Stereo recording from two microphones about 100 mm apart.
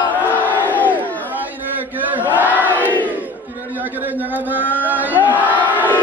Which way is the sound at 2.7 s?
15° left (ahead or behind).